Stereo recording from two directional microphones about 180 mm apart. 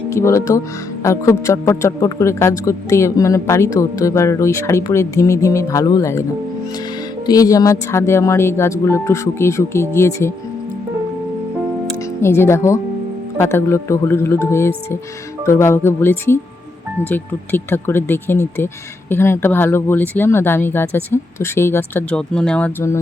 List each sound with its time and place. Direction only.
0.1 s speech: 15° left (ahead or behind)
7.3 s speech: 20° left (ahead or behind)
12.2 s speech: 15° left (ahead or behind)